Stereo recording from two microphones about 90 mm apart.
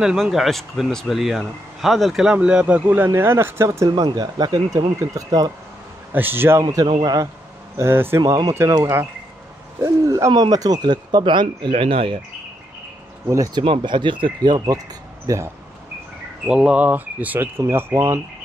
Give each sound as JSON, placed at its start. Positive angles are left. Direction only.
{"t": 0.0, "sound": "speech", "side_deg": -5}
{"t": 2.3, "sound": "speech", "side_deg": -15}
{"t": 3.1, "sound": "speech", "side_deg": -25}
{"t": 3.9, "sound": "speech", "side_deg": -50}
{"t": 6.1, "sound": "speech", "side_deg": -25}
{"t": 6.6, "sound": "speech", "side_deg": -45}
{"t": 7.7, "sound": "speech", "side_deg": -30}
{"t": 8.5, "sound": "speech", "side_deg": -40}
{"t": 13.6, "sound": "speech", "side_deg": -65}
{"t": 15.2, "sound": "speech", "side_deg": -30}
{"t": 16.4, "sound": "speech", "side_deg": -10}